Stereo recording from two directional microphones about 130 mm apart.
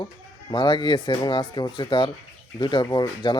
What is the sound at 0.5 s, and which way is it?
Speech, 35° left (ahead or behind).